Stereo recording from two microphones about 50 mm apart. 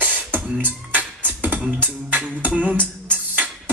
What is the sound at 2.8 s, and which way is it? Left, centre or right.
Music, right.